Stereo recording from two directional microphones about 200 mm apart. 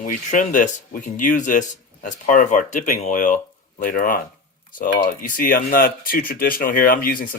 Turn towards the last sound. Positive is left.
turn(degrees=45)  # may be behind; listen again after turning